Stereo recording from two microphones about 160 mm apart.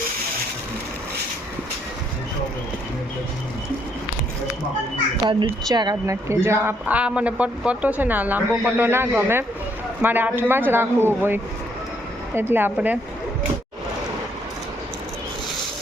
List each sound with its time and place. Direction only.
5.2 s speech: 30° right (ahead or behind); by 13.0 s 10° right (ahead or behind)